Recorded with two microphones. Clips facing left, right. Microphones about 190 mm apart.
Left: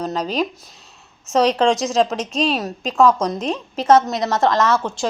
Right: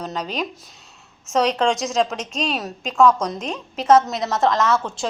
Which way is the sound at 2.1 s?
35° left (ahead or behind).